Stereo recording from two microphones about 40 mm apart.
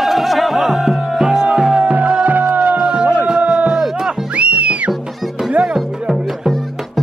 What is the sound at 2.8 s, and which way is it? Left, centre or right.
Music, right.